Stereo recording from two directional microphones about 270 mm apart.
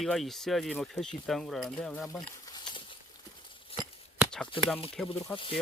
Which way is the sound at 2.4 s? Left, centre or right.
Centre.